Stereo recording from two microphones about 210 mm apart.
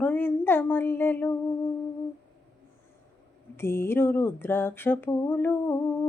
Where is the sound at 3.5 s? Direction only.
10° left (ahead or behind).